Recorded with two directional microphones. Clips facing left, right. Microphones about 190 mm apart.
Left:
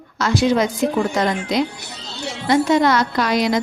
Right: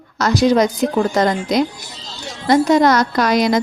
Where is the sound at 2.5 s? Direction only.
40° right (ahead or behind).